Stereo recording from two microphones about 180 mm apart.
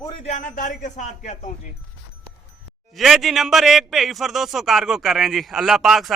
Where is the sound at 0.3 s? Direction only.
45° left (ahead or behind).